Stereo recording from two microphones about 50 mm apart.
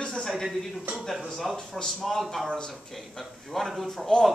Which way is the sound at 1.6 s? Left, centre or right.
Centre.